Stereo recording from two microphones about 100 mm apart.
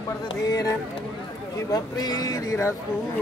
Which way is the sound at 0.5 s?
35° left (ahead or behind).